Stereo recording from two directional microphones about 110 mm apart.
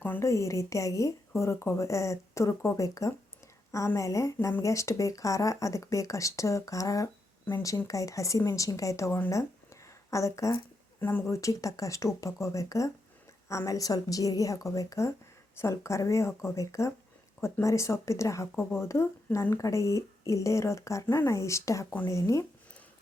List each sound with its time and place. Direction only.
0.0 s a woman's voice: 15° left (ahead or behind)
0.3 s speech: 30° left (ahead or behind)
11.3 s a woman's voice: 30° left (ahead or behind)